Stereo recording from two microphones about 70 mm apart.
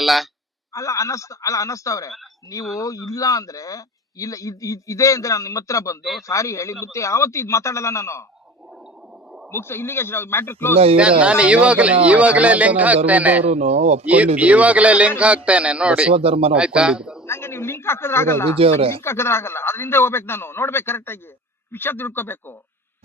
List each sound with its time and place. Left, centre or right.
0.0 s speech: centre
0.7 s speech: left
9.5 s speech: left
10.9 s a man's voice: centre
17.2 s speech: left